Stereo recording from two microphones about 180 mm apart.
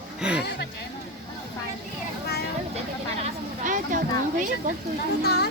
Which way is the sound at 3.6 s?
45° right (ahead or behind).